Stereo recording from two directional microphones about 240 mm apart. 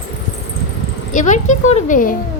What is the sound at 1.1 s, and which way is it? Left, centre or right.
Speech, left.